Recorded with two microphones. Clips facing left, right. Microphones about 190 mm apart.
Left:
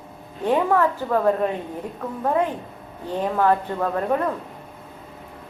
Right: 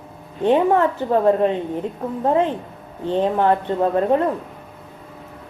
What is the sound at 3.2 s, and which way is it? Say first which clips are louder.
A woman's voice: right 2 dB; 25° right (ahead or behind).